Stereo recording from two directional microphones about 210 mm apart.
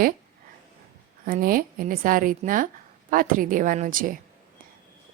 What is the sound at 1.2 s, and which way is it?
Speech, 40° right (ahead or behind).